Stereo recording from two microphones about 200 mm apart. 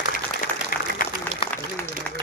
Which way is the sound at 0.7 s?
45° left (ahead or behind).